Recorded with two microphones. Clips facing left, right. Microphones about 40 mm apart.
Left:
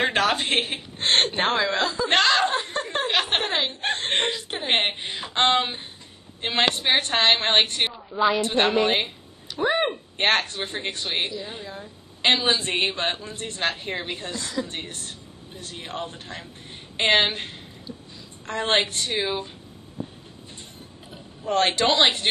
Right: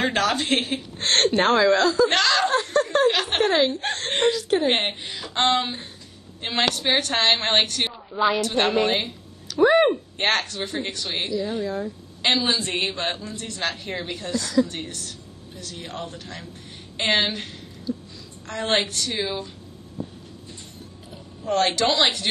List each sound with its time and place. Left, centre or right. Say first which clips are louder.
0.0 s a woman's voice: even; left
2.1 s snicker: even; left
5.3 s a woman's voice: even; left
7.9 s a woman's voice: even; centre
8.4 s a woman's voice: even; left
8.6 s a woman's voice: even; centre
9.0 s a sound: even; left
10.1 s a woman's voice: left 1 dB; left
17.3 s a sound: even; left
18.5 s a woman's voice: left 1 dB; left
21.4 s a woman's voice: even; left